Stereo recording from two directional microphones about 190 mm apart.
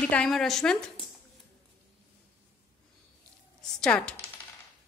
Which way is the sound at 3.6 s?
5° left (ahead or behind).